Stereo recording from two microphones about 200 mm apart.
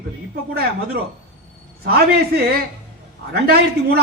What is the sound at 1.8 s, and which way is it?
A man's voice, 50° right (ahead or behind).